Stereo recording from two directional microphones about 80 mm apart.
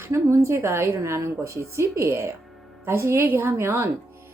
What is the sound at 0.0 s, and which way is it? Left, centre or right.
Speech, right.